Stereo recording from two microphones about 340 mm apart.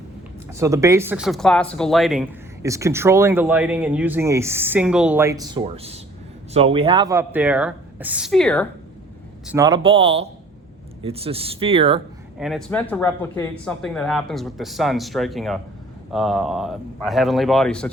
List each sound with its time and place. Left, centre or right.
0.5 s speech: centre
9.5 s speech: centre
12.4 s speech: centre